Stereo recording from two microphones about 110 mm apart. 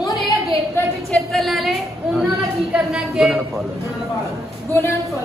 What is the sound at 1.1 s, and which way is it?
A woman's voice, centre (ahead or behind).